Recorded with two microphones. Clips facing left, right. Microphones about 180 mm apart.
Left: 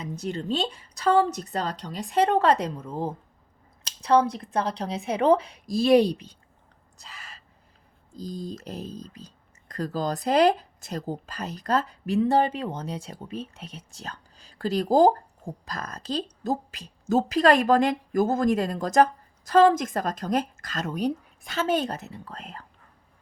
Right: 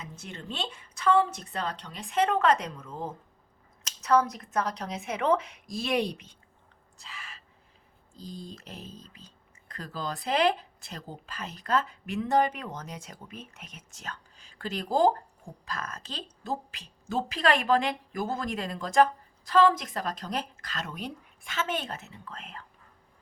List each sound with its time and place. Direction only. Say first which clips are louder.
0.0 s speech: left 11 dB; 35° left (ahead or behind)
7.0 s a sound: even; 40° left (ahead or behind)
8.1 s speech: left 7 dB; 40° left (ahead or behind)